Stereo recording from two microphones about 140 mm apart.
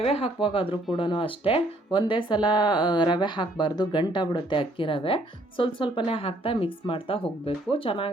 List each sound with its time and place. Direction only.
0.0 s speech: 45° left (ahead or behind)